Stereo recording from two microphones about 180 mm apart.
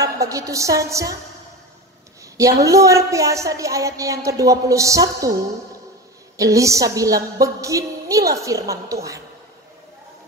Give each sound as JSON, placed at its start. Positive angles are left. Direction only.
{"t": 0.0, "sound": "a woman's voice", "side_deg": -20}
{"t": 2.3, "sound": "a woman's voice", "side_deg": -20}
{"t": 6.3, "sound": "a woman's voice", "side_deg": -20}